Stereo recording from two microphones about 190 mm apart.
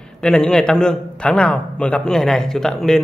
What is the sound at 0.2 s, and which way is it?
A man's voice, 5° left (ahead or behind).